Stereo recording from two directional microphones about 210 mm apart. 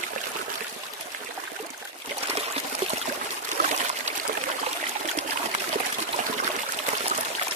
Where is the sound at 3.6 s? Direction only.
40° right (ahead or behind).